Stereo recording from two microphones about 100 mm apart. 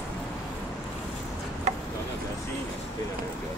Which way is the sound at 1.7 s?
90° right.